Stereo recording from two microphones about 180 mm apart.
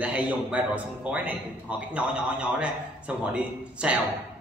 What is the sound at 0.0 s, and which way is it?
A man's voice, 10° right (ahead or behind).